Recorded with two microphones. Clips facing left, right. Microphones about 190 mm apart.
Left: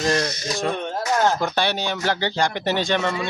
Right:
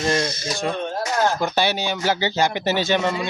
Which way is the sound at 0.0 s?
Centre (ahead or behind).